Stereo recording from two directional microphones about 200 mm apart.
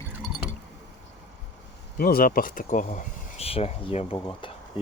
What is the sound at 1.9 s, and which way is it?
Speech, 50° left (ahead or behind).